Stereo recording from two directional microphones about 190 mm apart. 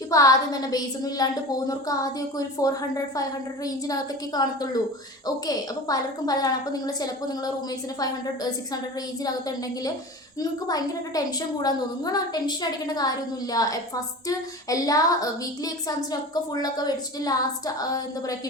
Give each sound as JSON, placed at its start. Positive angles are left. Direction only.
{"t": 0.1, "sound": "a woman's voice", "side_deg": 20}
{"t": 10.4, "sound": "a woman's voice", "side_deg": 20}